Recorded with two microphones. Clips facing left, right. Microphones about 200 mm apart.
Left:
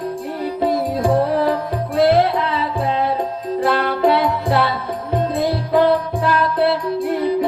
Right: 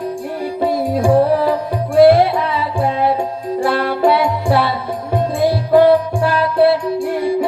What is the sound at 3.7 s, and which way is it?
Music, 10° right (ahead or behind).